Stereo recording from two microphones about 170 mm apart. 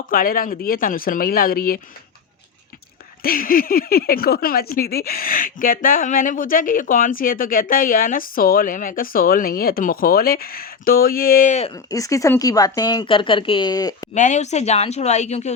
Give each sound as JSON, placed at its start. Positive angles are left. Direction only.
{"t": 0.1, "sound": "speech", "side_deg": 55}
{"t": 3.2, "sound": "speech", "side_deg": 55}
{"t": 11.7, "sound": "speech", "side_deg": 20}
{"t": 14.1, "sound": "a woman's voice", "side_deg": 45}